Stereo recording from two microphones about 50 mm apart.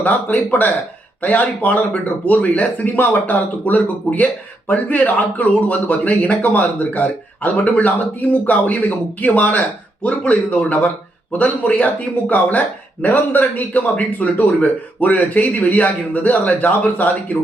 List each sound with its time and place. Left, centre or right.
0.0 s speech: left